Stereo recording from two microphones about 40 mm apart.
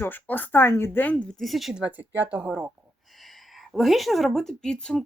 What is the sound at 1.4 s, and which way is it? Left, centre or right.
Speech, centre.